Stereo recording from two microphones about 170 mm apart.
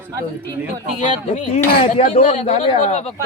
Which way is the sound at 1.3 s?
45° left (ahead or behind).